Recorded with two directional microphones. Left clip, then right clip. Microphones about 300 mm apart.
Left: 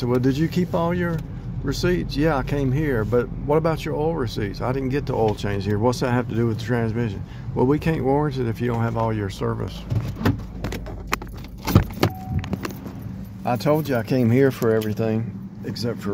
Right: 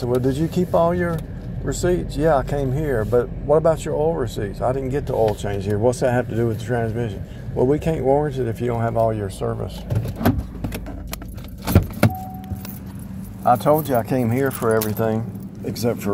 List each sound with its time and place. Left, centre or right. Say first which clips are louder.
0.0 s speech: right 1 dB; centre
13.4 s speech: right 5 dB; centre
14.1 s speech: left 2 dB; left
14.7 s speech: right 2 dB; centre
15.8 s speech: right 6 dB; centre